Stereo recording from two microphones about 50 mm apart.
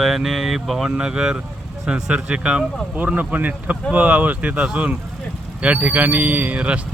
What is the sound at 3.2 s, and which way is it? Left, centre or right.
Speech, right.